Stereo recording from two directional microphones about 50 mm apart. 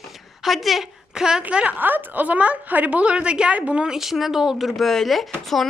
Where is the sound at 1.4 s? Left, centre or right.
Right.